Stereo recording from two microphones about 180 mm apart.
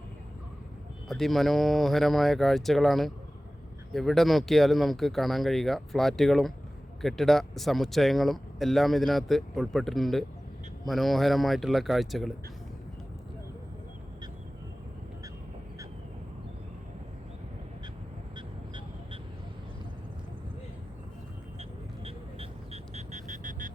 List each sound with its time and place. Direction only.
1.0 s speech: centre (ahead or behind)
18.3 s vehicle: 25° right (ahead or behind)
21.6 s vehicle: 35° right (ahead or behind)